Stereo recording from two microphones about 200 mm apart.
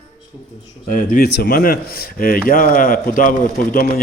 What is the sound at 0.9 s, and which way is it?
A man's voice, 40° left (ahead or behind).